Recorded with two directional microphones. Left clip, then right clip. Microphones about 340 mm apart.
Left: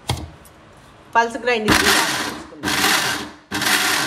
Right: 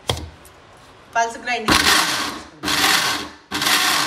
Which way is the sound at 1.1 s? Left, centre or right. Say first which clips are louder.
Left 3 dB; centre.